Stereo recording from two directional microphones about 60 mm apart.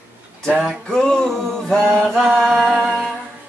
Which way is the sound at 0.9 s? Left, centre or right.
Centre.